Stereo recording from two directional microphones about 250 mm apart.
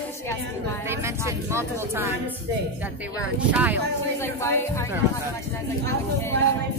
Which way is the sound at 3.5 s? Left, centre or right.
Centre.